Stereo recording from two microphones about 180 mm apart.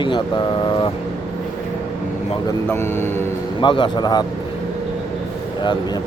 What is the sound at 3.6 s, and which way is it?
Speech, 25° left (ahead or behind).